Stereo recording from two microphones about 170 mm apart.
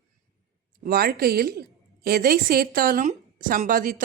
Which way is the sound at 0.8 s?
60° right (ahead or behind).